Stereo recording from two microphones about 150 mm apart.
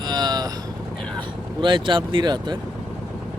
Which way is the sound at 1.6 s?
30° right (ahead or behind).